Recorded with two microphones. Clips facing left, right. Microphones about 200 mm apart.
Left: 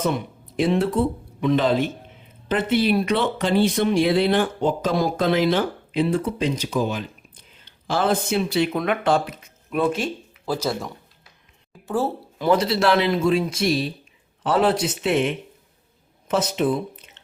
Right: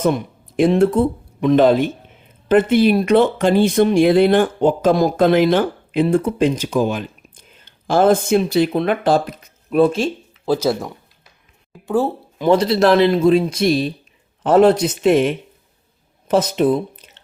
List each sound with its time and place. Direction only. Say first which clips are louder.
0.5 s speech: right 6 dB; 50° right (ahead or behind); by 10.6 s 25° right (ahead or behind)
11.9 s speech: right 5 dB; 15° right (ahead or behind)
12.5 s speech: right 5 dB; 35° right (ahead or behind)